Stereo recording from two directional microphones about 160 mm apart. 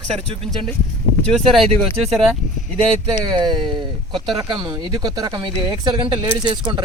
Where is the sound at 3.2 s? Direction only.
30° right (ahead or behind).